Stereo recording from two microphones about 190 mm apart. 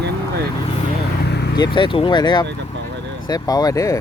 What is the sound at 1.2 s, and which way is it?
Vehicle, 60° left (ahead or behind).